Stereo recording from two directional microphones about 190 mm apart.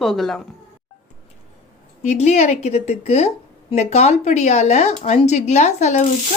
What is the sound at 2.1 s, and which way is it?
Speech, 35° left (ahead or behind).